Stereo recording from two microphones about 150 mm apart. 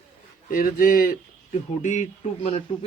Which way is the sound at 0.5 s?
70° left (ahead or behind).